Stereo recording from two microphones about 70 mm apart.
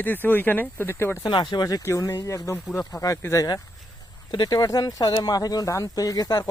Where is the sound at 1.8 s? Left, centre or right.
Left.